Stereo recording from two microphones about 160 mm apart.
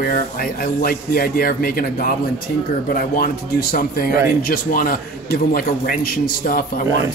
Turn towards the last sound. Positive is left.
turn(degrees=65)  # may be behind; listen again after turning